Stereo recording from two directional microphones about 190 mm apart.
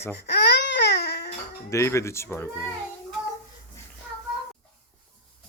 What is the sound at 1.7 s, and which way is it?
Speech, 15° left (ahead or behind).